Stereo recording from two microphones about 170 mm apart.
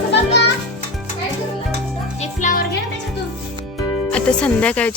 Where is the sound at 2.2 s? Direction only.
45° left (ahead or behind).